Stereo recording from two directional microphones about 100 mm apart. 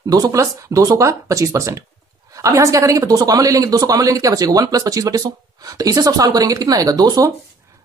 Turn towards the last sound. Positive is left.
turn(degrees=-40)  # may be behind; listen again after turning